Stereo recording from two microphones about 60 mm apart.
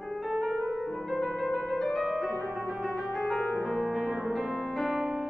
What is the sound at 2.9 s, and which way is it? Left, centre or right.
Piano, centre.